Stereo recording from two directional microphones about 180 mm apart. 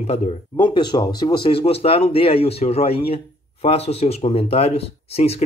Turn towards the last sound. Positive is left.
turn(degrees=35)  # may be behind; listen again after turning